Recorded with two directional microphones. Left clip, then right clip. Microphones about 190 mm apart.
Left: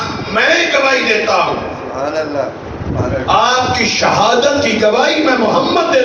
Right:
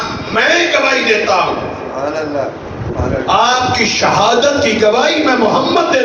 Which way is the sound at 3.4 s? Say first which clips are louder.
Right 1 dB; 45° right (ahead or behind).